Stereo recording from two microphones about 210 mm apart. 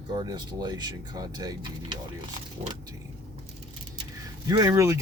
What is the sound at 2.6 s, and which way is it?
Speech, 30° right (ahead or behind).